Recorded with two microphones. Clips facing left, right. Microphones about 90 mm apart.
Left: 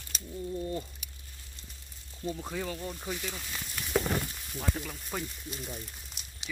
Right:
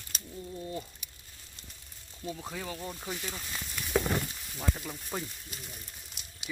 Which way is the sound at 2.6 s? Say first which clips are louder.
Left 2 dB; 15° right (ahead or behind).